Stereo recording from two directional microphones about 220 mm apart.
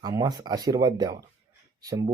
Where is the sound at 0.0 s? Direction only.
15° right (ahead or behind).